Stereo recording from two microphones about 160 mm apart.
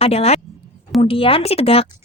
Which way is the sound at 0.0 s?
40° left (ahead or behind).